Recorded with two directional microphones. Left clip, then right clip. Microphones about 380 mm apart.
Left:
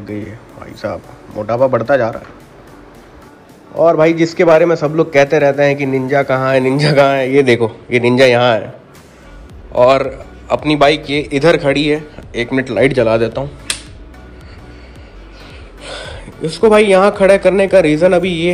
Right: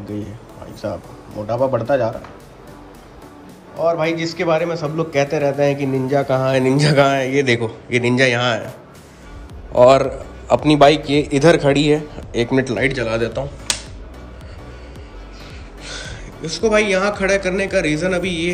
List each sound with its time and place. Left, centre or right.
1.4 s a man's voice: centre
3.8 s a man's voice: centre
9.7 s a man's voice: centre
16.8 s a man's voice: centre